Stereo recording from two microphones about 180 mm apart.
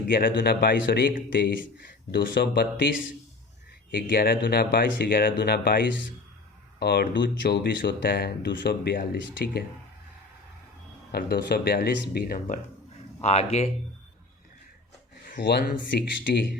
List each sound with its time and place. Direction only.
0.1 s speech: 55° left (ahead or behind); by 2.9 s 70° left (ahead or behind)
3.9 s speech: 60° left (ahead or behind)
11.1 s speech: 60° left (ahead or behind)
13.2 s speech: 35° left (ahead or behind)
15.4 s speech: 70° left (ahead or behind)